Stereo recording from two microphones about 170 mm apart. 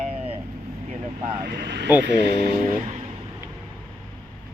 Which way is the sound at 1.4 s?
65° right (ahead or behind).